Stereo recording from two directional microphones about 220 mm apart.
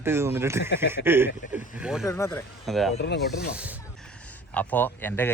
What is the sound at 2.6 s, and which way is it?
Speech, centre (ahead or behind).